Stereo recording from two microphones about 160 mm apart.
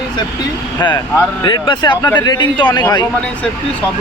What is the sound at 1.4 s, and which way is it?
A man's voice, 30° left (ahead or behind).